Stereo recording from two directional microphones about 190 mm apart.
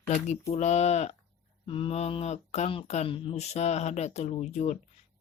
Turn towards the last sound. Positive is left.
turn(degrees=35)  # may be behind; listen again after turning